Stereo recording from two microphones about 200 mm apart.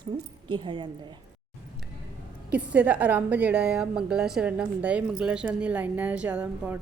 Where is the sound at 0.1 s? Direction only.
20° right (ahead or behind).